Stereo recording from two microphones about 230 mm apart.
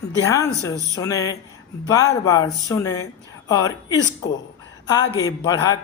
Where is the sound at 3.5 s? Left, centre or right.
Centre.